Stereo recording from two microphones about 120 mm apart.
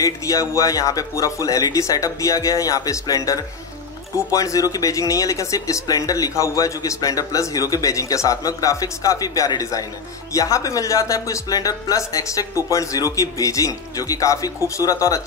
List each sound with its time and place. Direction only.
0.0 s speech: 30° left (ahead or behind)